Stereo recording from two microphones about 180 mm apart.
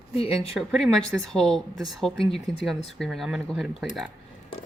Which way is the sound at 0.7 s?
Centre (ahead or behind).